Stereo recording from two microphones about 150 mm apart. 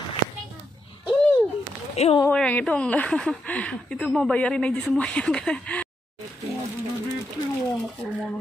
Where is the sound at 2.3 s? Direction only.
5° left (ahead or behind).